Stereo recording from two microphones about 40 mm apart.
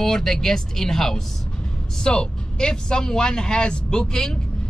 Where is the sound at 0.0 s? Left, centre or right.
Centre.